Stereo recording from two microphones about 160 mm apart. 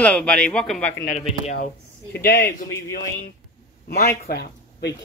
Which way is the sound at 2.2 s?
80° left.